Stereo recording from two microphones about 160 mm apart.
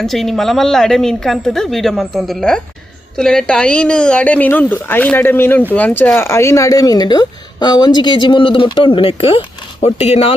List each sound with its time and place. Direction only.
0.0 s a woman's voice: centre (ahead or behind); by 10.3 s 40° left (ahead or behind)